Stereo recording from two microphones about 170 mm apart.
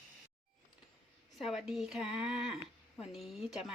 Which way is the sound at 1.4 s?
Centre (ahead or behind).